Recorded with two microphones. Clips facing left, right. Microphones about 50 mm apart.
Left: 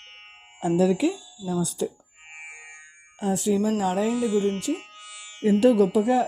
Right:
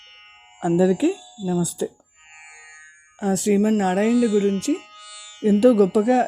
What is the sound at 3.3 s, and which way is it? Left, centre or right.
Speech, right.